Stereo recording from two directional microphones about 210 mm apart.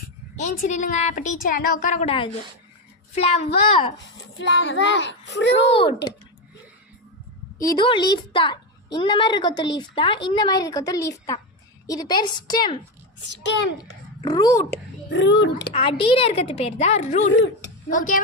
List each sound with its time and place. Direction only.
0.3 s a woman's voice: 35° left (ahead or behind)
3.9 s a child's voice: 55° left (ahead or behind)
5.5 s a woman's voice: 25° left (ahead or behind)
7.7 s a woman's voice: 20° left (ahead or behind)
13.4 s a child's voice: 55° left (ahead or behind)
14.2 s a child's voice: 15° left (ahead or behind)
15.2 s a child's voice: 55° left (ahead or behind)
15.7 s a woman's voice: 25° left (ahead or behind)
17.3 s a child's voice: 60° left (ahead or behind)
17.8 s a woman's voice: 40° left (ahead or behind)